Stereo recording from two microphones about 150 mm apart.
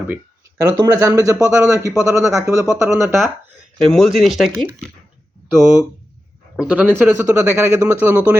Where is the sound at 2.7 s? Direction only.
20° right (ahead or behind).